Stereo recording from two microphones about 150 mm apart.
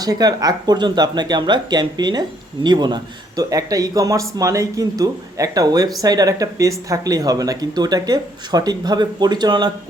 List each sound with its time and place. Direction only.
0.0 s speech: 25° right (ahead or behind)